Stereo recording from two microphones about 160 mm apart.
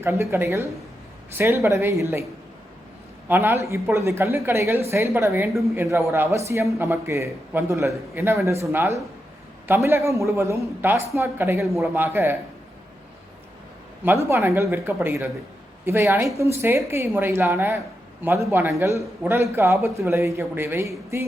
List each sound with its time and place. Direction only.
0.0 s a man's voice: 15° right (ahead or behind)
3.2 s a man's voice: 15° right (ahead or behind)
14.0 s a man's voice: 15° right (ahead or behind)